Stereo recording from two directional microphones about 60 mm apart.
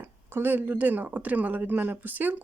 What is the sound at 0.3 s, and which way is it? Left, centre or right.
Speech, right.